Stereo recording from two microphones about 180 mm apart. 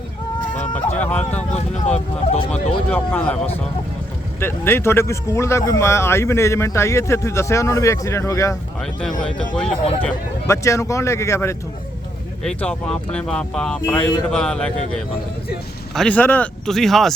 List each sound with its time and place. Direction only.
0.9 s speech: 10° left (ahead or behind)
1.5 s speech: 40° left (ahead or behind)
2.5 s speech: 10° left (ahead or behind)
8.8 s speech: 5° left (ahead or behind)
16.0 s speech: 5° left (ahead or behind)